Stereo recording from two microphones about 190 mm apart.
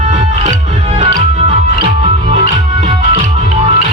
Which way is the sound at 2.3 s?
40° right (ahead or behind).